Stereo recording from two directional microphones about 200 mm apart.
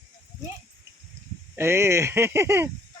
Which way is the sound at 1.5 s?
10° right (ahead or behind).